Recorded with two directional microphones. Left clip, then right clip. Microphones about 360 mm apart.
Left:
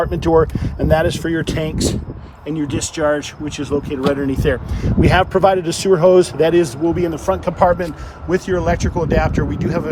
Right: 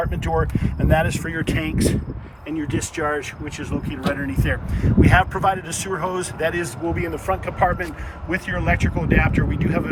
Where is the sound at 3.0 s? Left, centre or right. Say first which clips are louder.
Left 8 dB; centre.